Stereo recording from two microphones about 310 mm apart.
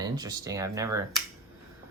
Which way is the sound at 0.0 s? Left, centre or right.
Centre.